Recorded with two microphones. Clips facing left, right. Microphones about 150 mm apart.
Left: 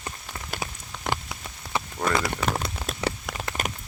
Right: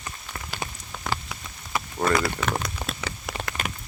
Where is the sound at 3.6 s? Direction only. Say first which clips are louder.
Left 1 dB; 40° left (ahead or behind).